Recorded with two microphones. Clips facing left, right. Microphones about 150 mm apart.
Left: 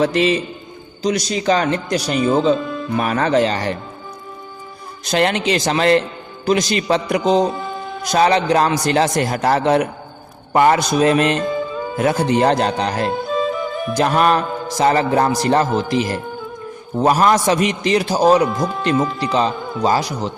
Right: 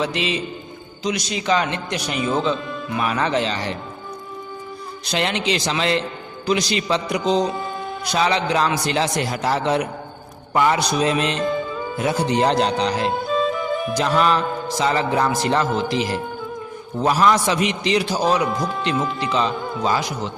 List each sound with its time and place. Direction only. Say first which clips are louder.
0.0 s a man's voice: left 7 dB; 45° left (ahead or behind)
2.1 s speech: left 5 dB; centre (ahead or behind)
3.0 s a man's voice: left 5 dB; 45° left (ahead or behind)
5.1 s a man's voice: left 5 dB; 50° left (ahead or behind)
7.5 s music: left 1 dB; centre (ahead or behind)
8.1 s a man's voice: left 5 dB; 45° left (ahead or behind)
11.3 s speech: left 1 dB; centre (ahead or behind)
11.9 s a man's voice: left 4 dB; 55° left (ahead or behind)
13.1 s music: left 1 dB; centre (ahead or behind)
13.9 s a man's voice: left 4 dB; 50° left (ahead or behind)
18.4 s speech: left 3 dB; centre (ahead or behind)
19.2 s speech: left 3 dB; 35° left (ahead or behind)